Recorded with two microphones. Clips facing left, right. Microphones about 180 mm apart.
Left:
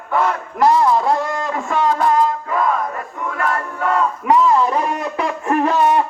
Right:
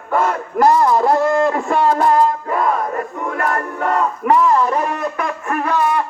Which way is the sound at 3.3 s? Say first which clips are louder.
Right 1 dB; 40° right (ahead or behind).